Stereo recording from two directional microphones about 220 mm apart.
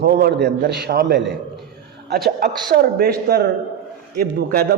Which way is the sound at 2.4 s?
45° right (ahead or behind).